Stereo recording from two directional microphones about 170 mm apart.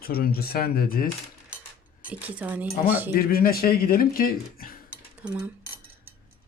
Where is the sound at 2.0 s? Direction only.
10° right (ahead or behind).